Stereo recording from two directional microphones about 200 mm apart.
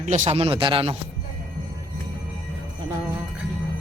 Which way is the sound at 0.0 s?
35° right (ahead or behind).